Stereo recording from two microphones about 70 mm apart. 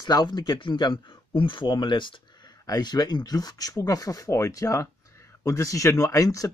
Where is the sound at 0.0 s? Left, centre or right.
Left.